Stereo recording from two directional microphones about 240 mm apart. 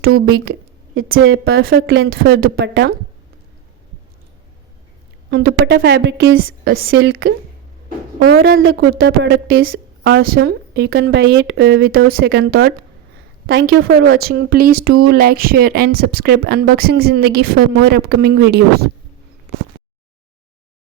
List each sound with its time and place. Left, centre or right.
0.0 s a woman's voice: right
5.3 s a woman's voice: right
7.9 s speech: right
8.5 s a woman's voice: right
9.0 s a woman's voice: right
10.0 s a woman's voice: right
13.5 s a woman's voice: right
14.2 s a woman's voice: right